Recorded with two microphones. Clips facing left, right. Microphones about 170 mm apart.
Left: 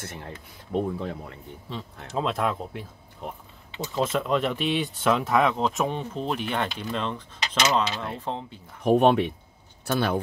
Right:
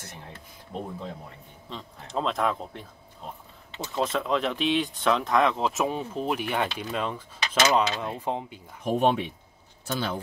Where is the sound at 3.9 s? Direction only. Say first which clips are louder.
Left 2 dB; centre (ahead or behind); by 8.5 s 15° right (ahead or behind).